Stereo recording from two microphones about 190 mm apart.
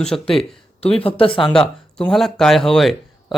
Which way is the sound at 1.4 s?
5° left (ahead or behind).